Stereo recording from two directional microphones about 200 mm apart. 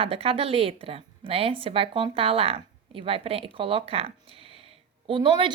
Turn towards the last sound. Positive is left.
turn(degrees=-25)  # may be behind; listen again after turning